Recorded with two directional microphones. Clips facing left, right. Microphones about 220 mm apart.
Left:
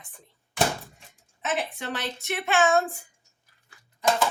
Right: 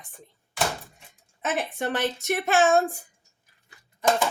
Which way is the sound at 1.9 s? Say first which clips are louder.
Right 6 dB; 50° right (ahead or behind).